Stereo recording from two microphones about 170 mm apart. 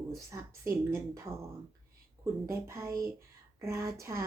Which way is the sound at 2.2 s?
15° right (ahead or behind).